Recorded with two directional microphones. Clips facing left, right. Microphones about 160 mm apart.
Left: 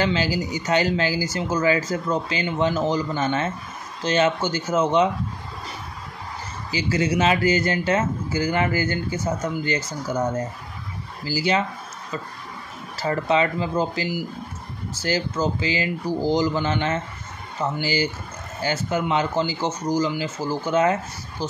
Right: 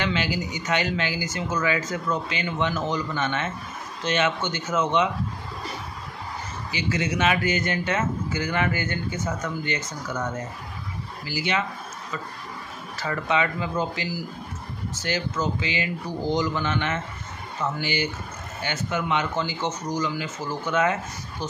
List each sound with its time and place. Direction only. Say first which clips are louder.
0.0 s speech: left 4 dB; 35° left (ahead or behind)
6.7 s speech: left 4 dB; 35° left (ahead or behind)
12.9 s speech: left 4 dB; 35° left (ahead or behind)